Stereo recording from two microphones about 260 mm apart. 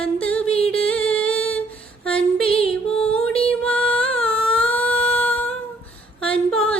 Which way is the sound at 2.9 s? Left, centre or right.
Centre.